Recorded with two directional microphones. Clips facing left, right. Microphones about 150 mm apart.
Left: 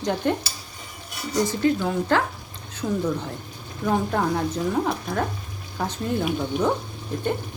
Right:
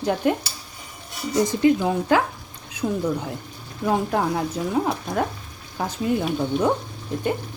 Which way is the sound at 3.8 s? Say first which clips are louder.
Right 1 dB; 5° right (ahead or behind).